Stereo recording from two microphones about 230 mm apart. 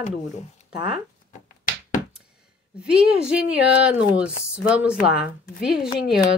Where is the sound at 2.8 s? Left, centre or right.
Centre.